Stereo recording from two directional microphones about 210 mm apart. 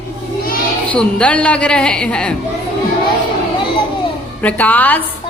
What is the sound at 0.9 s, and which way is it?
A woman's voice, 5° left (ahead or behind).